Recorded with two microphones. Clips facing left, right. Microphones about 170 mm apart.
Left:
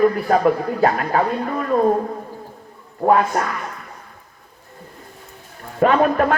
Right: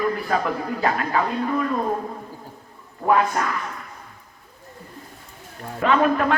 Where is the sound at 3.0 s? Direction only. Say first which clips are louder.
Left 3 dB; 40° left (ahead or behind).